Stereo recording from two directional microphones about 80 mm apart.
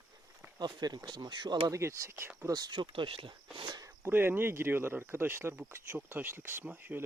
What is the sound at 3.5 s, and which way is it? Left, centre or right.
Speech, right.